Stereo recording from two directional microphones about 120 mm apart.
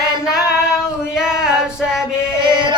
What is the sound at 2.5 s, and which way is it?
Music, 40° right (ahead or behind).